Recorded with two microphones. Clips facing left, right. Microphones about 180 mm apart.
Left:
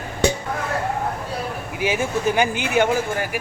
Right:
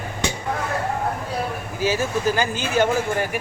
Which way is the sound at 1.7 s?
15° left (ahead or behind).